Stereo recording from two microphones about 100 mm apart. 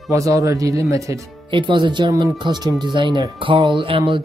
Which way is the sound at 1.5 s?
50° right (ahead or behind).